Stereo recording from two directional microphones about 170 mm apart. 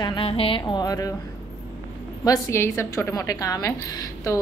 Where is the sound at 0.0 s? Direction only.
30° left (ahead or behind).